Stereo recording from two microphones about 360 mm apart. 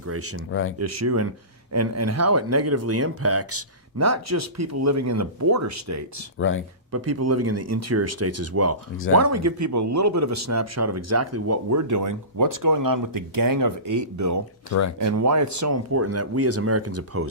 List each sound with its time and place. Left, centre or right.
0.0 s speech: right
0.3 s speech: left
0.8 s speech: right
6.4 s speech: left
6.9 s speech: right
14.7 s speech: left
15.0 s speech: right